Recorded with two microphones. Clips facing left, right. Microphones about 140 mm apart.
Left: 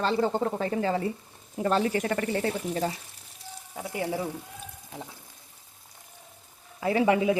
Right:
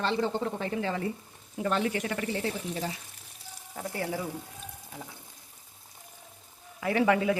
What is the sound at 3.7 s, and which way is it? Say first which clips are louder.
Speech: left 2 dB; 15° left (ahead or behind).